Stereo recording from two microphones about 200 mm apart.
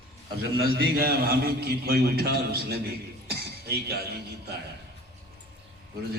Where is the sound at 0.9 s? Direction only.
50° right (ahead or behind).